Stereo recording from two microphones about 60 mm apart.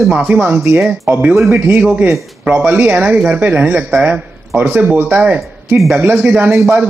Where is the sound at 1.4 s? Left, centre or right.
Right.